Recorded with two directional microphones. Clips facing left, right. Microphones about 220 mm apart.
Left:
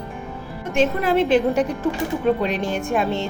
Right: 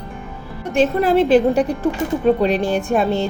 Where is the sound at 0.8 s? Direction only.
35° right (ahead or behind).